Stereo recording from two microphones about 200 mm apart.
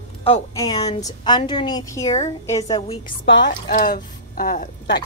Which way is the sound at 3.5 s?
45° left (ahead or behind).